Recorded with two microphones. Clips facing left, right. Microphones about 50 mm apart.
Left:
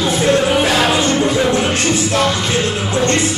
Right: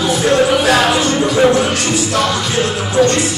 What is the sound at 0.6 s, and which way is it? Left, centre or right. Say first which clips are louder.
Music: right 2 dB; left.